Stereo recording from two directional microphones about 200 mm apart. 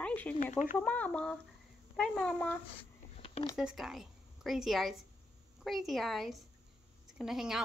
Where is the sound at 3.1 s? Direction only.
30° left (ahead or behind).